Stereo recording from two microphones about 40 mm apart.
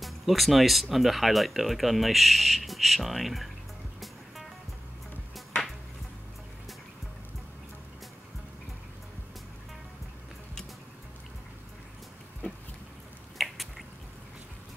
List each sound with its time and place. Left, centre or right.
0.0 s speech: centre
13.4 s drip: centre